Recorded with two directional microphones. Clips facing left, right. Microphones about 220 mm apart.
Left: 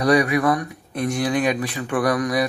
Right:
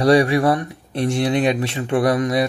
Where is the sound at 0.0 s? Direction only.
30° right (ahead or behind).